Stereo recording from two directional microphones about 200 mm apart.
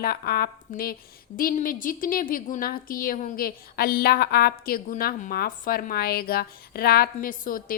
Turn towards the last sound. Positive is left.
turn(degrees=45)  # may be behind; listen again after turning